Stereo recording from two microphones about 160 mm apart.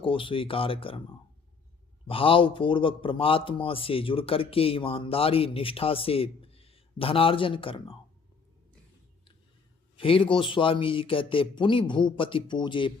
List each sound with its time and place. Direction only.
0.0 s a man's voice: 35° left (ahead or behind)
2.0 s a man's voice: 35° left (ahead or behind)
10.0 s a man's voice: 35° left (ahead or behind)